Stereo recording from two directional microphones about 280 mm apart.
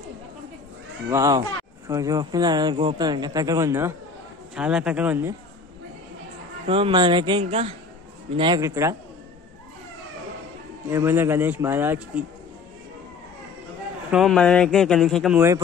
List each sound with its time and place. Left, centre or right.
1.1 s a man's voice: centre
6.7 s speech: centre
10.9 s speech: centre
14.1 s a man's voice: centre